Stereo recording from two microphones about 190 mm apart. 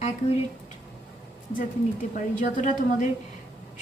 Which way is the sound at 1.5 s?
45° left (ahead or behind).